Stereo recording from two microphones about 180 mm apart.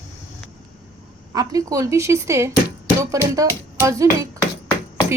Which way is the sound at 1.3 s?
20° right (ahead or behind).